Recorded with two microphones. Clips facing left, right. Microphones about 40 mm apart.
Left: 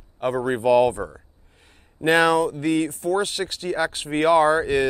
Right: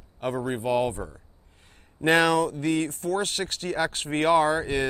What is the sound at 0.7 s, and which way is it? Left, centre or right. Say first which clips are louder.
Speech: left 9 dB; left.